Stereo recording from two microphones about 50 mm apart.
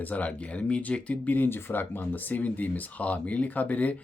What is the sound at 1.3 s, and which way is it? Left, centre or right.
Speech, left.